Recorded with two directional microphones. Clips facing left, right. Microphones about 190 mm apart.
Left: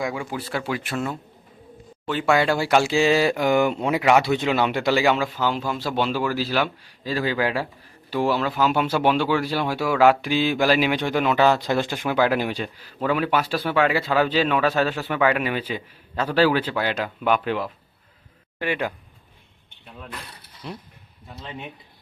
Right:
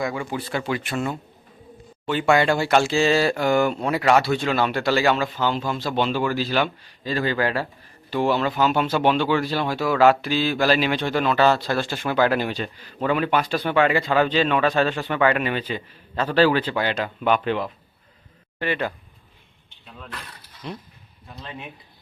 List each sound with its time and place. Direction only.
0.0 s speech: 5° left (ahead or behind)
20.6 s speech: 5° left (ahead or behind)